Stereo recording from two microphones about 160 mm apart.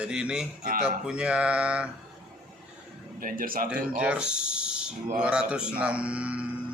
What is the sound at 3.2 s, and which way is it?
Speech, 60° right (ahead or behind).